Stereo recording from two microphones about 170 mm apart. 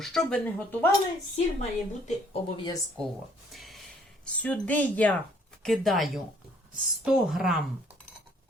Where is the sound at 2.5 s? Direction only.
25° left (ahead or behind).